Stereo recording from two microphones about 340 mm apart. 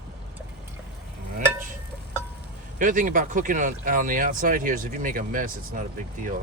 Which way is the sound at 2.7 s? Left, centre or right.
Right.